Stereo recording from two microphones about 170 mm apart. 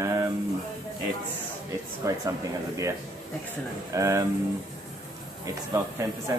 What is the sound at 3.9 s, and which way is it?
Speech, 20° right (ahead or behind).